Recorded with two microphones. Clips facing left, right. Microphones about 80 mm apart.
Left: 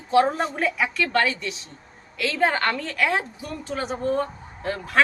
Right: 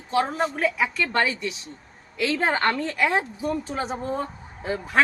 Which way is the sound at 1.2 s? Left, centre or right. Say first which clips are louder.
Even; centre.